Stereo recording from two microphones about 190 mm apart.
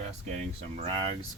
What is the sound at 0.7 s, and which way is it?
Speech, 25° right (ahead or behind).